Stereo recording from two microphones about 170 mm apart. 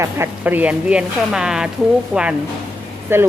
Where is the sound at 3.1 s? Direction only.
15° right (ahead or behind).